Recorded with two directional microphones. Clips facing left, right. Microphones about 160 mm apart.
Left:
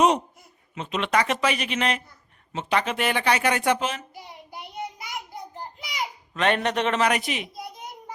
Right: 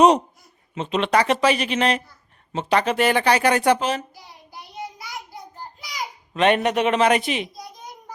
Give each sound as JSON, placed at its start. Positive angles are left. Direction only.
{"t": 0.7, "sound": "speech", "side_deg": -30}
{"t": 5.5, "sound": "a sound", "side_deg": 20}
{"t": 6.3, "sound": "a man's voice", "side_deg": -15}
{"t": 7.0, "sound": "a woman's voice", "side_deg": -25}